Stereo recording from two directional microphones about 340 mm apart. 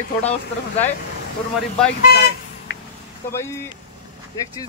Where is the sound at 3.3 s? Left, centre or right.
Centre.